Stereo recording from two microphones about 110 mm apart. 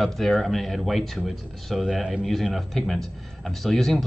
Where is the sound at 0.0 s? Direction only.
5° left (ahead or behind).